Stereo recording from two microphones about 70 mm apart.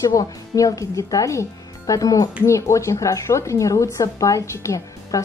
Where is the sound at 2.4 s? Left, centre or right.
Left.